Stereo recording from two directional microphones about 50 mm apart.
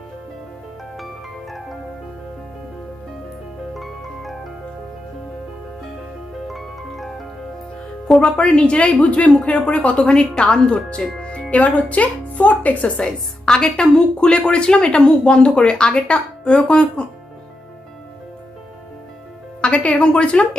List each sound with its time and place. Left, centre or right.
0.9 s music: centre
3.8 s music: centre
6.5 s music: centre
8.2 s speech: centre
13.1 s a woman's voice: centre
19.6 s speech: left